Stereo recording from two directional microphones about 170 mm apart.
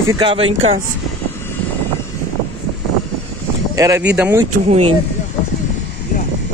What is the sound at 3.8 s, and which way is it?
Speech, 20° right (ahead or behind).